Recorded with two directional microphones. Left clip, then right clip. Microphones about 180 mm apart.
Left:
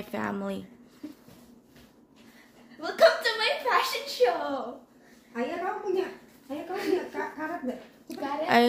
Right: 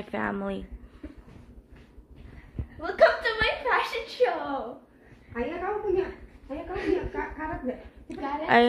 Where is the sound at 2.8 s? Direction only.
20° left (ahead or behind).